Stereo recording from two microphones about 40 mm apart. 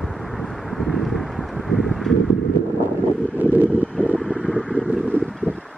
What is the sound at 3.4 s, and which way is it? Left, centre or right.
Vehicle, right.